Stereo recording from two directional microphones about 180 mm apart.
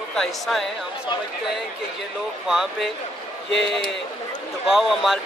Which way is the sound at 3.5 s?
75° left (ahead or behind).